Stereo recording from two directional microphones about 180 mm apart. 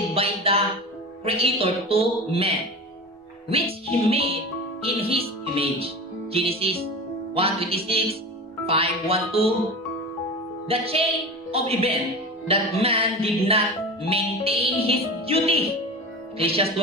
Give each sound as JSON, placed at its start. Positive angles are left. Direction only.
{"t": 0.1, "sound": "music", "side_deg": -30}
{"t": 10.7, "sound": "music", "side_deg": -30}